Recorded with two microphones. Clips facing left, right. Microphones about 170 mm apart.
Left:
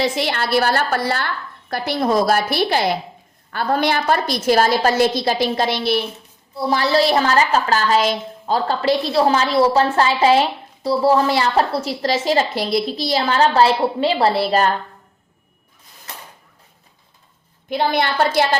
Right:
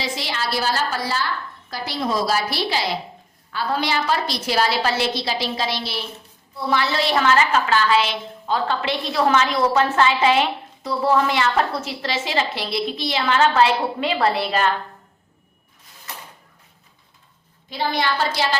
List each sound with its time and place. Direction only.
0.0 s a woman's voice: 60° left (ahead or behind)
6.5 s a woman's voice: 35° left (ahead or behind)
17.7 s a woman's voice: 55° left (ahead or behind)